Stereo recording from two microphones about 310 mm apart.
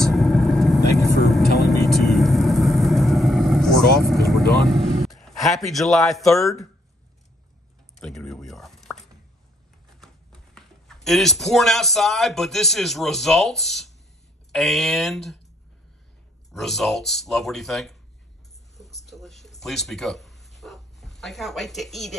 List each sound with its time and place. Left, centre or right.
0.1 s vehicle: centre
5.0 s speech: centre
8.0 s a sound: centre
9.9 s speech: centre
16.5 s speech: centre
19.0 s dog: centre